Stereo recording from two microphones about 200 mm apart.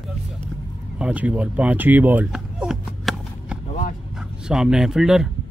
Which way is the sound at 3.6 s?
40° left (ahead or behind).